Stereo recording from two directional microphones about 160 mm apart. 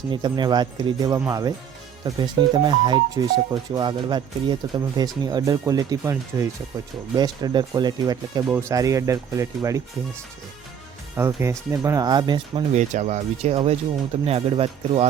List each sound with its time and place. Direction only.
0.1 s speech: 30° right (ahead or behind)
11.2 s speech: 15° right (ahead or behind)
12.7 s speech: 45° right (ahead or behind)